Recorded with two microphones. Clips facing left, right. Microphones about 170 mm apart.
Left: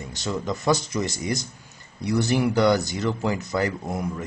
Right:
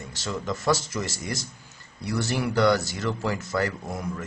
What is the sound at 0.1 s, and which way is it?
Speech, 15° left (ahead or behind).